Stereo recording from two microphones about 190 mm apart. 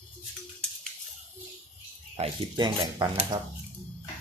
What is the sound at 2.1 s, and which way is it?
Speech, 25° right (ahead or behind).